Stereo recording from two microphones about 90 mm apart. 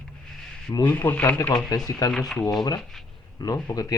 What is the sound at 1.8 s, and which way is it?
Speech, 45° left (ahead or behind).